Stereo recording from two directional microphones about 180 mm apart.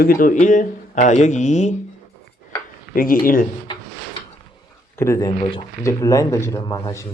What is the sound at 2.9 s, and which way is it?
Speech, 50° left (ahead or behind).